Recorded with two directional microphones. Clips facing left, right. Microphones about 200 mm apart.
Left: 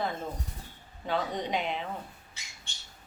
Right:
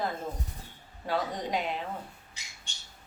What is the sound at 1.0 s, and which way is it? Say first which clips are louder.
Speech: even; 5° right (ahead or behind).